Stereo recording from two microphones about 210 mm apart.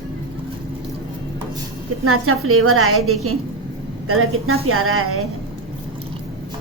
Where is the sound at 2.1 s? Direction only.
90° right.